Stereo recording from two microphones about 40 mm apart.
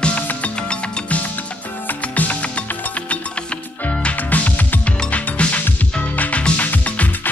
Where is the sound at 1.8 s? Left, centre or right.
Left.